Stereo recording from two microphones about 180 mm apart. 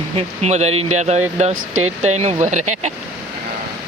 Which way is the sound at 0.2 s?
35° right (ahead or behind).